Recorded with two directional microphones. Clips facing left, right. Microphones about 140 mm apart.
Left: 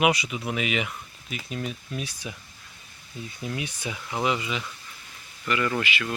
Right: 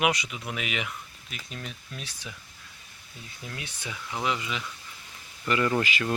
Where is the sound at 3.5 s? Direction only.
15° left (ahead or behind).